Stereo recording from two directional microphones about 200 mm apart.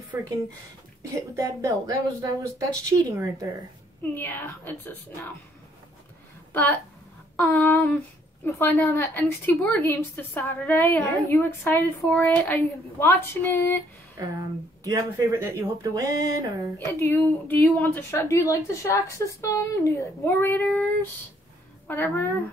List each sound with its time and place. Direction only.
1.1 s speech: 15° right (ahead or behind)
4.0 s a woman's voice: 10° left (ahead or behind)
6.5 s a woman's voice: 10° left (ahead or behind)
14.1 s speech: 15° right (ahead or behind)
16.7 s a woman's voice: 10° left (ahead or behind)
21.8 s a woman's voice: 10° left (ahead or behind)